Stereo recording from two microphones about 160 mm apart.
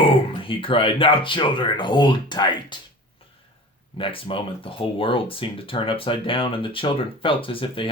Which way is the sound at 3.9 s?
35° left (ahead or behind).